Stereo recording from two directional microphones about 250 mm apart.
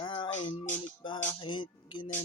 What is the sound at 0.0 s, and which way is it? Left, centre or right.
Music, centre.